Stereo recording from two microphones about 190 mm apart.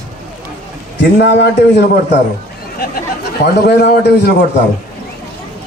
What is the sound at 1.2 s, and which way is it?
Speech, 60° left (ahead or behind).